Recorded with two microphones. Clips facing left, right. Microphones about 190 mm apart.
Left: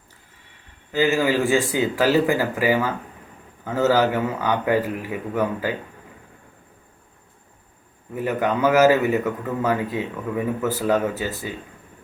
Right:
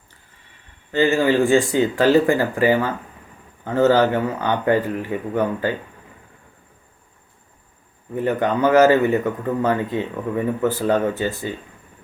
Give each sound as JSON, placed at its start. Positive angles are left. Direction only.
{"t": 0.9, "sound": "speech", "side_deg": 10}
{"t": 3.8, "sound": "speech", "side_deg": 5}
{"t": 8.1, "sound": "speech", "side_deg": 5}